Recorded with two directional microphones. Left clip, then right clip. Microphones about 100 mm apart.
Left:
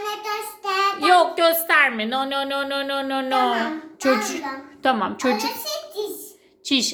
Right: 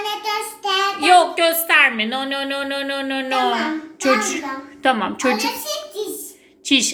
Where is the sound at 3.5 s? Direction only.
30° left (ahead or behind).